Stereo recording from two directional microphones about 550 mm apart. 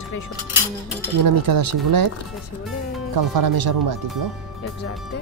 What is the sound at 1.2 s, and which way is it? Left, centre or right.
Speech, right.